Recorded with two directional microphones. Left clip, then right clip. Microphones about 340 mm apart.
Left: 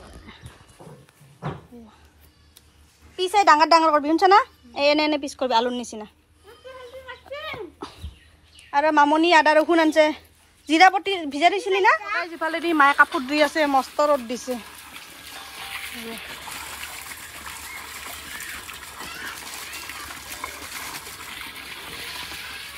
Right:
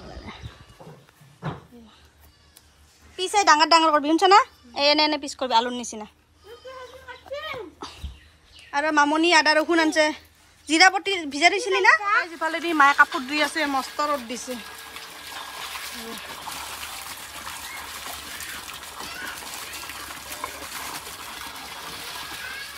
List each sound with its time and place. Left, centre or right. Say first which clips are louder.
0.3 s dog: right 6 dB; centre
3.2 s a woman's voice: left 2 dB; centre
7.2 s a sound: right 1 dB; centre
8.6 s a woman's voice: left 3 dB; centre
16.5 s water: even; centre